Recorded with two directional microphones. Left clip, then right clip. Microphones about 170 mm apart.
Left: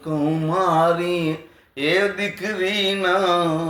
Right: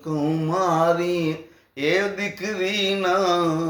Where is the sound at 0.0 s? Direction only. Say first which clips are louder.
Left 2 dB; 15° right (ahead or behind).